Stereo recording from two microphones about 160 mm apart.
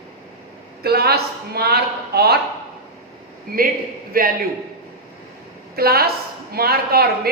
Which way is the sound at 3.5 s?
65° right (ahead or behind).